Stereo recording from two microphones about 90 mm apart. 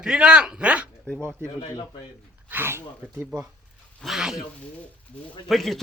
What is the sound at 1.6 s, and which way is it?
Speech, 60° left (ahead or behind).